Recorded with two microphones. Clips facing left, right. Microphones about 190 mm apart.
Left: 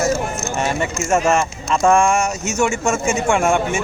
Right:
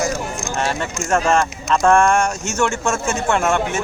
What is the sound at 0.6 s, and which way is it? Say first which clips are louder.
Speech: left 2 dB; 10° left (ahead or behind).